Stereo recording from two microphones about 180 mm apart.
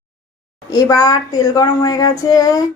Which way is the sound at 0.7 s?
20° left (ahead or behind).